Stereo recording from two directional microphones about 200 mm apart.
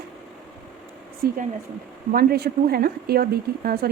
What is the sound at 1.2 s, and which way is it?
Speech, 50° right (ahead or behind).